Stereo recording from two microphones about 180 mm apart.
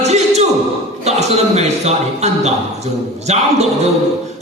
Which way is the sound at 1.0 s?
35° right (ahead or behind).